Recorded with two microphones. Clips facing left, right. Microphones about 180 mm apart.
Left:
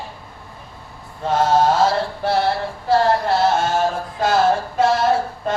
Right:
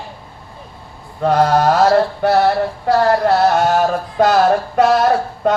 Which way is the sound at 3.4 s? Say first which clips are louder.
Right 4 dB; 65° right (ahead or behind).